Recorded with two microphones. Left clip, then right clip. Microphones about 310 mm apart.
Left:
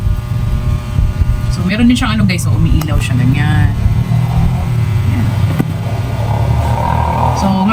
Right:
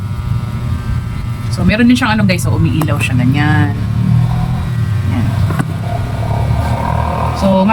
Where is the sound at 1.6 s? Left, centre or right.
Centre.